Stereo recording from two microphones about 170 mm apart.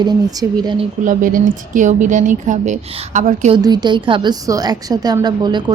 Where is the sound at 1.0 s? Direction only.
50° right (ahead or behind).